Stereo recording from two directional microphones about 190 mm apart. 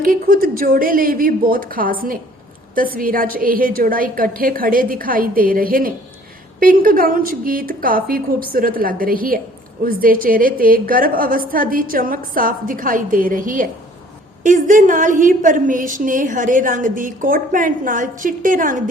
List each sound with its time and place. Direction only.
0.0 s a woman's voice: 50° right (ahead or behind)